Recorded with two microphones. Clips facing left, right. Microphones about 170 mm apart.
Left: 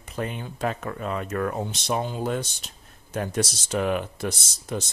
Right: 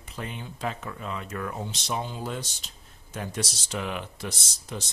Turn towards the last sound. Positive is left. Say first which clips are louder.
# left 6 dB
turn(degrees=50)  # may be behind; listen again after turning